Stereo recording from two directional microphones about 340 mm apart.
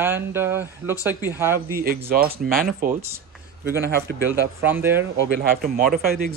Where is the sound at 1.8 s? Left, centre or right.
Right.